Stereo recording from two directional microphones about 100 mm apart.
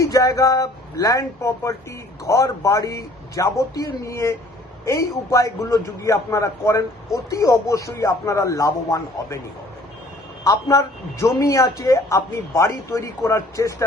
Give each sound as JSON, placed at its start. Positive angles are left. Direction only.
{"t": 0.0, "sound": "a man's voice", "side_deg": 35}
{"t": 10.4, "sound": "a man's voice", "side_deg": 30}